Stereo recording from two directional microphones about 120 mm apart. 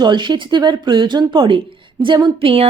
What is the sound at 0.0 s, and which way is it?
Speech, 40° right (ahead or behind).